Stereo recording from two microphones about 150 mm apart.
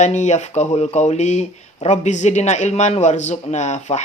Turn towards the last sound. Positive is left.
turn(degrees=50)  # may be behind; listen again after turning